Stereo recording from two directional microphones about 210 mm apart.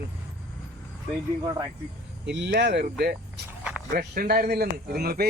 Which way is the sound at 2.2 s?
55° right (ahead or behind).